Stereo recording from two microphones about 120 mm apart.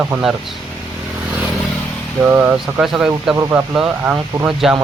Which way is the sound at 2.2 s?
15° right (ahead or behind).